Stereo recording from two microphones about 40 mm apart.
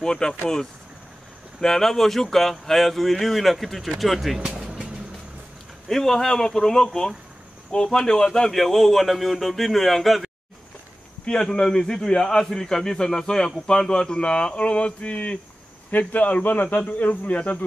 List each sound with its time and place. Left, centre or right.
0.0 s speech: centre
1.6 s speech: centre
5.9 s a man's voice: centre
11.2 s a man's voice: centre; by 17.4 s left